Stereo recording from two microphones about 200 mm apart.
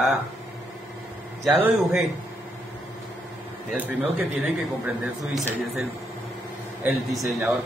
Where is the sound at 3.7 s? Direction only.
10° right (ahead or behind).